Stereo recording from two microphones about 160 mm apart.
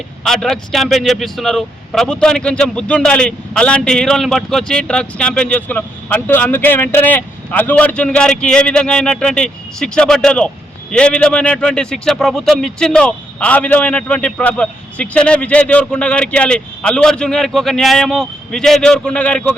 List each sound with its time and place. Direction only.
0.3 s a man's voice: centre (ahead or behind)